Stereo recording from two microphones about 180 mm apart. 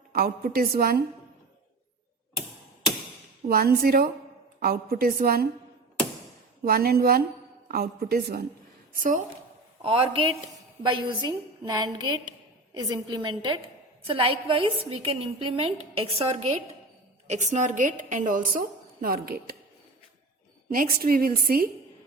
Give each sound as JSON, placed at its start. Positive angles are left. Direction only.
{"t": 0.1, "sound": "a woman's voice", "side_deg": -55}
{"t": 3.5, "sound": "a woman's voice", "side_deg": -55}
{"t": 6.7, "sound": "a woman's voice", "side_deg": -60}
{"t": 9.0, "sound": "a woman's voice", "side_deg": -50}
{"t": 9.8, "sound": "a woman's voice", "side_deg": -30}
{"t": 10.9, "sound": "music", "side_deg": -25}
{"t": 14.0, "sound": "a woman's voice", "side_deg": -30}
{"t": 19.0, "sound": "a woman's voice", "side_deg": -55}
{"t": 20.7, "sound": "a woman's voice", "side_deg": -50}